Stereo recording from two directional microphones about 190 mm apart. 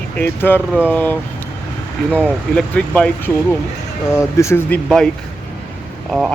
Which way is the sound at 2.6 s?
5° left (ahead or behind).